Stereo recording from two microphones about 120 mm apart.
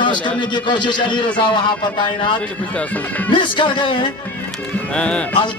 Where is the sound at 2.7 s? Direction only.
10° left (ahead or behind).